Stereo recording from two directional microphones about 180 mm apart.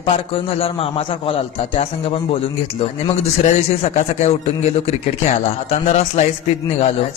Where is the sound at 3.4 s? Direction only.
40° left (ahead or behind).